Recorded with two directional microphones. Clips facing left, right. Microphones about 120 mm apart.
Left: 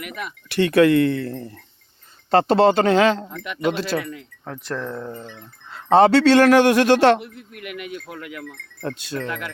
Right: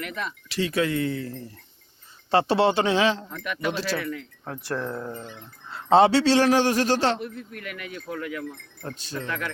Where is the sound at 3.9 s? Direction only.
55° left (ahead or behind).